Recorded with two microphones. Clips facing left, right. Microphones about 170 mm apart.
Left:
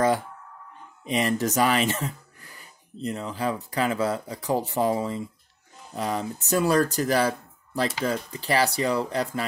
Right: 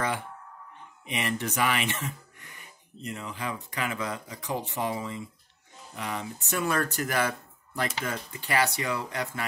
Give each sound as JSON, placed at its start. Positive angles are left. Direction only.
{"t": 1.0, "sound": "speech", "side_deg": 35}